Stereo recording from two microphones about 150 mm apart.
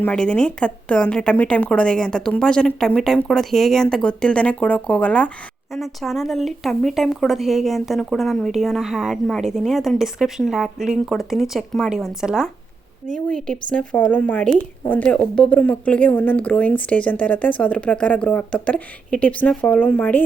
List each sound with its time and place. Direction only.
0.0 s a woman's voice: 5° left (ahead or behind)
13.1 s a woman's voice: 5° left (ahead or behind)